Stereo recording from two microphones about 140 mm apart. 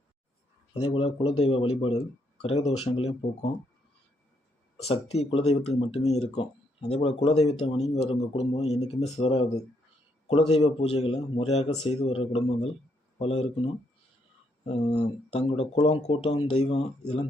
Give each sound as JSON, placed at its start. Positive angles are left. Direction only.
{"t": 0.7, "sound": "a man's voice", "side_deg": 40}
{"t": 4.8, "sound": "a man's voice", "side_deg": 50}
{"t": 15.3, "sound": "a man's voice", "side_deg": 50}
{"t": 16.2, "sound": "a man's voice", "side_deg": 40}